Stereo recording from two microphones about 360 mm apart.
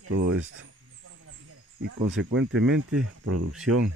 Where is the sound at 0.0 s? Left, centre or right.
Right.